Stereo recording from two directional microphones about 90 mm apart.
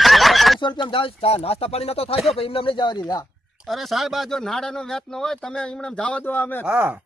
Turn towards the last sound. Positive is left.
turn(degrees=-20)  # may be behind; listen again after turning